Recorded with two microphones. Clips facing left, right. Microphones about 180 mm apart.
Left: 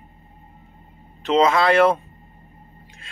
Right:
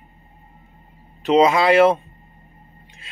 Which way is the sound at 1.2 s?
15° right (ahead or behind).